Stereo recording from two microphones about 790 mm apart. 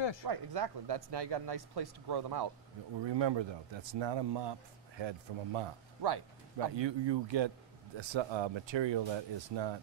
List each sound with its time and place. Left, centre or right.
0.3 s speech: right